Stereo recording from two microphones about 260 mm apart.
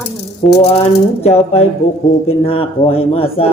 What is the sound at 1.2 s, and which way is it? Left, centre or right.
A man's voice, left.